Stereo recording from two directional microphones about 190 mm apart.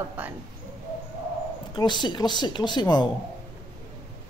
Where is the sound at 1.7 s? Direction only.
25° left (ahead or behind).